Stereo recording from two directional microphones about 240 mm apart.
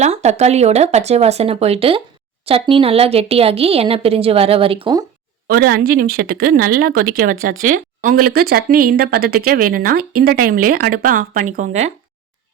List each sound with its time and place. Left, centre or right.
0.0 s speech: right
5.5 s speech: right